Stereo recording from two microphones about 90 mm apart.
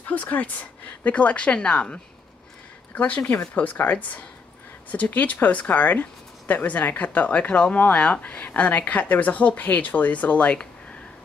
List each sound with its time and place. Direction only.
0.1 s speech: 15° left (ahead or behind)